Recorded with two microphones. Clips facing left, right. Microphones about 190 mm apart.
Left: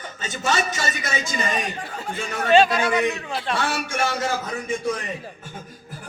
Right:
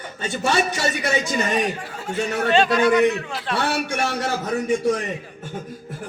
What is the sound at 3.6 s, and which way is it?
Speech, 60° right (ahead or behind).